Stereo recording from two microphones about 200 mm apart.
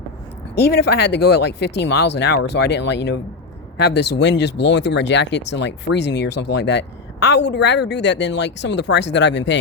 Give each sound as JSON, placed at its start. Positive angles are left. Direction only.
{"t": 0.5, "sound": "speech", "side_deg": 55}